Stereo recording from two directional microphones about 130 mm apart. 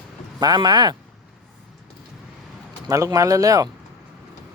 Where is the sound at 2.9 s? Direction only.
25° right (ahead or behind).